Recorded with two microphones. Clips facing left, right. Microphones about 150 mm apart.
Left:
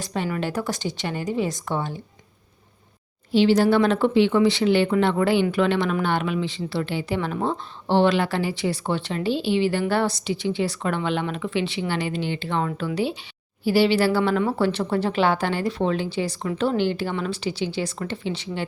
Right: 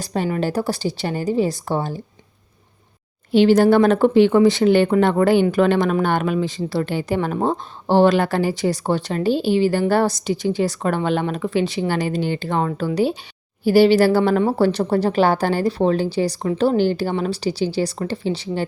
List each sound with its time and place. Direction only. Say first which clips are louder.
0.0 s a woman's voice: right 5 dB; 40° right (ahead or behind)
3.3 s a woman's voice: right 4 dB; 50° right (ahead or behind)